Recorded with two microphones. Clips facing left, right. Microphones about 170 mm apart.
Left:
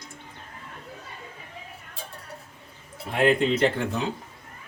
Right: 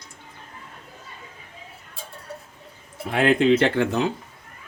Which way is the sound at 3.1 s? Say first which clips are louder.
Right 4 dB; 90° right.